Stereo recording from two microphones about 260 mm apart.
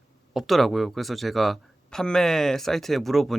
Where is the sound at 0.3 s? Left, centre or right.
Centre.